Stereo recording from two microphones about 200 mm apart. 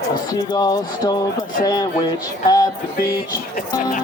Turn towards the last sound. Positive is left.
turn(degrees=50)  # may be behind; listen again after turning